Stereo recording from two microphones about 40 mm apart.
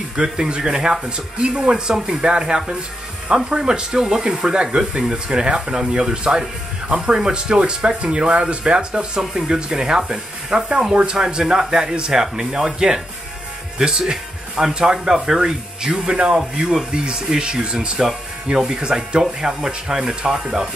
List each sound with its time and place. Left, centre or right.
0.1 s speech: right
9.2 s speech: centre
15.1 s speech: centre